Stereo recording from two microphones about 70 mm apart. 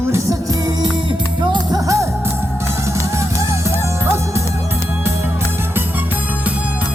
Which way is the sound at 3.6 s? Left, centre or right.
Right.